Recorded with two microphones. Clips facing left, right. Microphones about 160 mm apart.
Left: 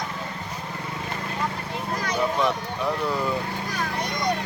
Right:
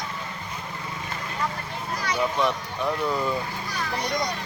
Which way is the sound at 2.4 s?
Centre (ahead or behind).